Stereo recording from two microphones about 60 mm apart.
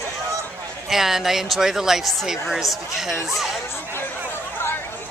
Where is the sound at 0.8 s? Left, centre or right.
Centre.